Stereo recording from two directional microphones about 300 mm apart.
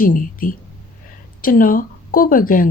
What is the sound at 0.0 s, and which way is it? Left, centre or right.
Speech, left.